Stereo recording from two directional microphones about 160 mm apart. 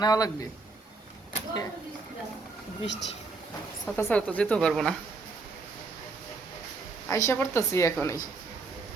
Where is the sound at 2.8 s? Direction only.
90° left.